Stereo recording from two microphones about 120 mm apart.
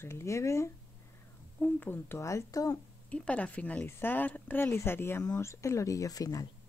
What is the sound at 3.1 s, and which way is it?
Speech, 10° left (ahead or behind).